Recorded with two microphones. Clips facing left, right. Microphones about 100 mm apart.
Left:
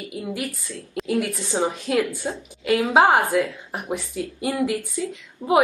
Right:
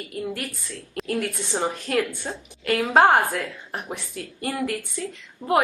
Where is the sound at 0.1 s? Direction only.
10° left (ahead or behind).